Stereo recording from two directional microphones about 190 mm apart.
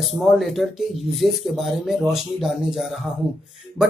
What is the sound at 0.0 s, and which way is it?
Speech, centre (ahead or behind).